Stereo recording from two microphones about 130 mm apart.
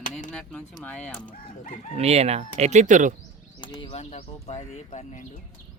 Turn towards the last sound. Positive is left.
turn(degrees=60)  # may be behind; listen again after turning